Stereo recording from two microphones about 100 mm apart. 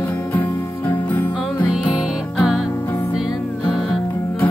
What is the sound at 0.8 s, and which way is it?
Music, 15° left (ahead or behind).